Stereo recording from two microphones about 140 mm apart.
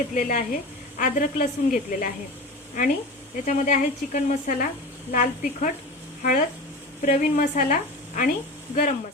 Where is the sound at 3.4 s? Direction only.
65° left (ahead or behind).